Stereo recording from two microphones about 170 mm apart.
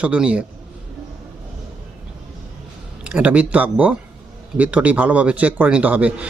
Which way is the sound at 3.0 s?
5° right (ahead or behind).